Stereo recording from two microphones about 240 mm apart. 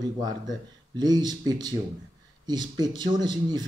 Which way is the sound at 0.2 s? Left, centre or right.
Centre.